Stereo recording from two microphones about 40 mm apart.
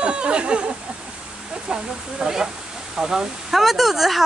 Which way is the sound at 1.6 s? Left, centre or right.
Right.